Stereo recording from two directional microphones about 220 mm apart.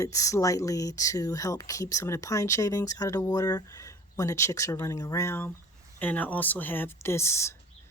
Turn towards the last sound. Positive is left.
turn(degrees=10)  # may be behind; listen again after turning